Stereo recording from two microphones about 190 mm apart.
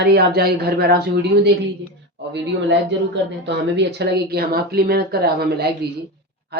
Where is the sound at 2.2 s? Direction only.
65° right (ahead or behind).